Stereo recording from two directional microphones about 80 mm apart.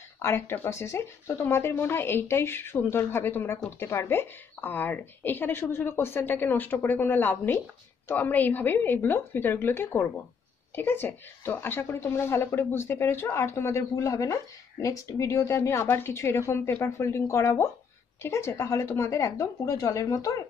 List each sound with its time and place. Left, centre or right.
0.2 s speech: left